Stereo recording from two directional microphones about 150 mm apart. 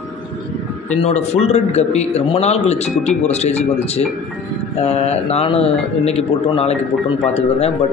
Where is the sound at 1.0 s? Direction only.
45° left (ahead or behind).